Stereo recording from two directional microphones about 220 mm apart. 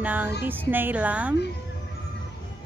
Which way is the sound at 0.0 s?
5° right (ahead or behind).